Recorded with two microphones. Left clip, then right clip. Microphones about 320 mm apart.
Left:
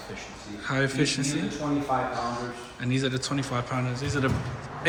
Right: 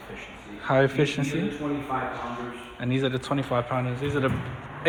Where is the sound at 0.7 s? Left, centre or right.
Centre.